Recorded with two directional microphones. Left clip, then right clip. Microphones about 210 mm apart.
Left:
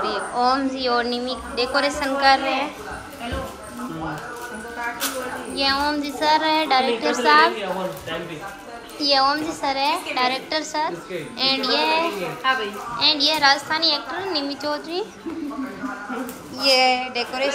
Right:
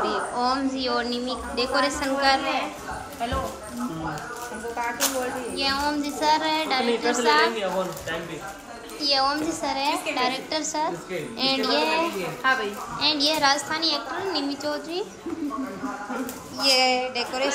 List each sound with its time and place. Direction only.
0.0 s a woman's voice: 10° right (ahead or behind)
5.6 s a woman's voice: 10° right (ahead or behind)
9.0 s a woman's voice: 10° right (ahead or behind)
16.5 s a woman's voice: 5° right (ahead or behind)